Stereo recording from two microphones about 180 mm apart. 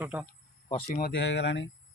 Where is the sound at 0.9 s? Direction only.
50° left (ahead or behind).